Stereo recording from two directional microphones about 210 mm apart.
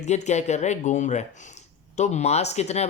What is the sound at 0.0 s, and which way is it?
Speech, 35° left (ahead or behind).